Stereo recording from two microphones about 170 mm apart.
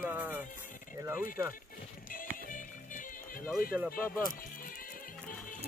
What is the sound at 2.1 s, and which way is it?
Music, 55° left (ahead or behind).